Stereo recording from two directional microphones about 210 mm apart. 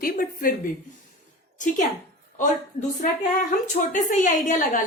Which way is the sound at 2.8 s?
25° left (ahead or behind).